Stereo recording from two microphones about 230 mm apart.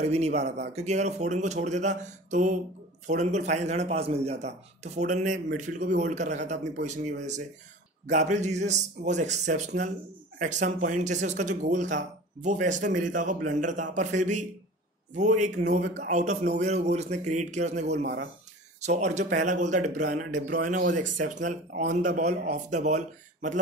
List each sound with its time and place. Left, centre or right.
0.0 s a man's voice: right
18.0 s speech: right
18.8 s a man's voice: right